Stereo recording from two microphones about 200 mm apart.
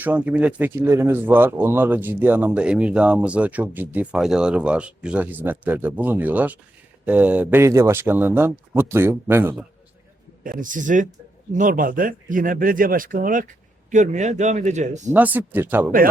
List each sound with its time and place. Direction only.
0.0 s speech: 10° right (ahead or behind)
10.4 s speech: 40° right (ahead or behind)
15.1 s speech: 10° right (ahead or behind)